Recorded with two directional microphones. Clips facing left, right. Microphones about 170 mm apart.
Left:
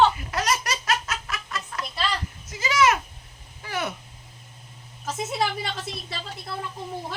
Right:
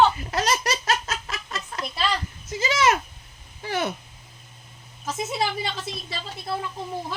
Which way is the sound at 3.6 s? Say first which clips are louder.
Right 3 dB; 30° right (ahead or behind).